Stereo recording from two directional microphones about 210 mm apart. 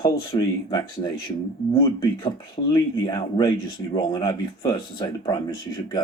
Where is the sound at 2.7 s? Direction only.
20° left (ahead or behind).